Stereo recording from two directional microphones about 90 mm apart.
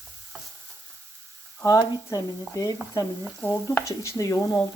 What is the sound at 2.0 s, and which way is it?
Speech, 40° left (ahead or behind).